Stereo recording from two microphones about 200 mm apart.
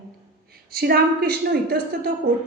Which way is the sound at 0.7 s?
50° right (ahead or behind).